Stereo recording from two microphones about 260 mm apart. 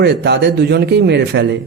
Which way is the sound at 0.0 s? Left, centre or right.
Right.